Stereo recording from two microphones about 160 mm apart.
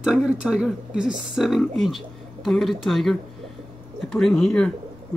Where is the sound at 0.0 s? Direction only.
5° right (ahead or behind).